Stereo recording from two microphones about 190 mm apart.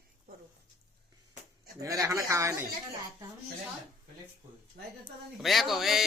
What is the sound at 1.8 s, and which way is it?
Speech, 15° right (ahead or behind).